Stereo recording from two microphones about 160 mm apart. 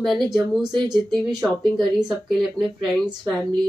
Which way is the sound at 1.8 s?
Centre (ahead or behind).